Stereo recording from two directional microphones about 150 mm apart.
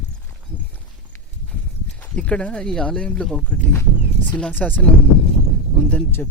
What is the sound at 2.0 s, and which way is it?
Speech, 10° left (ahead or behind).